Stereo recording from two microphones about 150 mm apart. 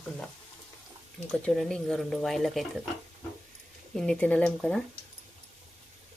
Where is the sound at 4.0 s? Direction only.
5° left (ahead or behind).